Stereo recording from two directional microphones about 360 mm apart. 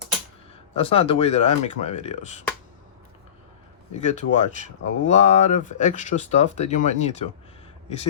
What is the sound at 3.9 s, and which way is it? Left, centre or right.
Speech, centre.